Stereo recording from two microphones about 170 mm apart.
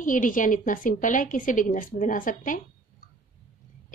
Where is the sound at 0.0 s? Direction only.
50° left (ahead or behind).